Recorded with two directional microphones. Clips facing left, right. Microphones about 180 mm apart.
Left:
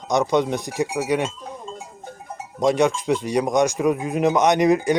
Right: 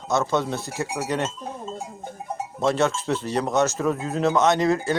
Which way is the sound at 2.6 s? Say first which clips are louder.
Left 4 dB; 15° left (ahead or behind).